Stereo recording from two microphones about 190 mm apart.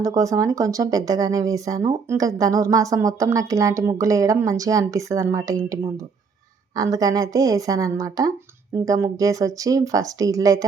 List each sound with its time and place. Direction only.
0.0 s speech: 15° right (ahead or behind)